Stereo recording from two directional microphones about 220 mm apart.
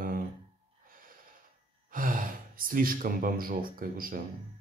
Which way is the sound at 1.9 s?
40° right (ahead or behind).